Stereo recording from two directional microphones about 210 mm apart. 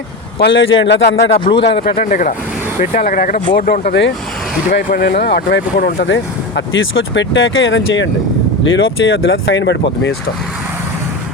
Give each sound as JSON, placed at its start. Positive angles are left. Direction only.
{"t": 0.3, "sound": "speech", "side_deg": 55}
{"t": 1.9, "sound": "speech", "side_deg": 35}
{"t": 6.7, "sound": "speech", "side_deg": 60}